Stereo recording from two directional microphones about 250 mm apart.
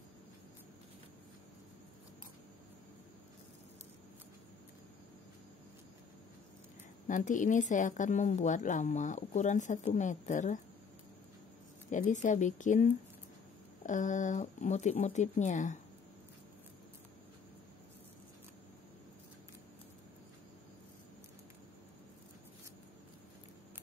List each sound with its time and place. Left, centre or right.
7.1 s speech: left
11.9 s speech: left